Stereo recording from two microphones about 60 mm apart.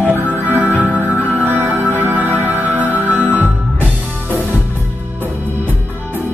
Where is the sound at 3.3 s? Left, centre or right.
Left.